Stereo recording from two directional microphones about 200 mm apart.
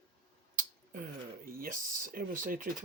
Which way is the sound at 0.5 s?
40° right (ahead or behind).